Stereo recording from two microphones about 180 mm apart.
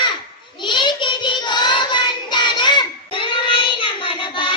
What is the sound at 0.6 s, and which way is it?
Child singing, 25° left (ahead or behind).